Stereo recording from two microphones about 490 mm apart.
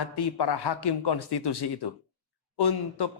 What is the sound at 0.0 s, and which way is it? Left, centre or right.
A man's voice, left.